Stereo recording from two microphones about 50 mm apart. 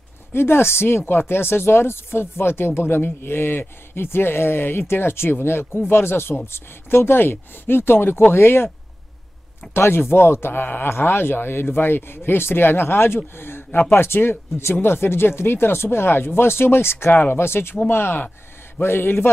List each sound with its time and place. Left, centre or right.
0.3 s speech: left
9.8 s speech: left
17.1 s speech: left
17.4 s speech: left